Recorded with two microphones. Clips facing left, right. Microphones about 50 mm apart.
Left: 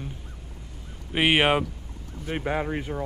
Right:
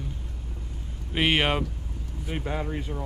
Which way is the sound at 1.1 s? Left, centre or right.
Centre.